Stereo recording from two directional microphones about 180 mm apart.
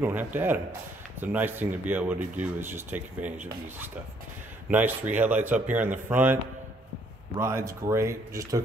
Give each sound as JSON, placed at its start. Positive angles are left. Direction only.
{"t": 0.0, "sound": "speech", "side_deg": -10}
{"t": 4.6, "sound": "speech", "side_deg": -10}
{"t": 7.3, "sound": "speech", "side_deg": -15}